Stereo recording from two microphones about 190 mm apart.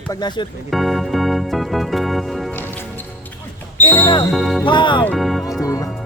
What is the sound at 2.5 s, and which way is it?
Music, 10° left (ahead or behind).